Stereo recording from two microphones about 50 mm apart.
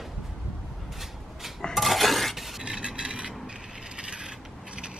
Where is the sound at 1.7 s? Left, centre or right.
Centre.